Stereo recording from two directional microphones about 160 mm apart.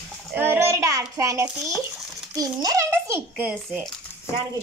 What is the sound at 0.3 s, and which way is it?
Child singing, 15° right (ahead or behind).